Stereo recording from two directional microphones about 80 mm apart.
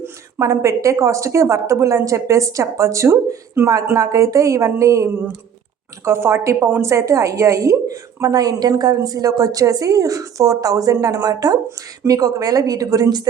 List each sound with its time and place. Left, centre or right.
0.0 s speech: right
3.9 s a woman's voice: right